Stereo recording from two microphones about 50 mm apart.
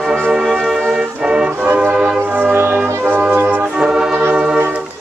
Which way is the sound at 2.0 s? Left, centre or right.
Right.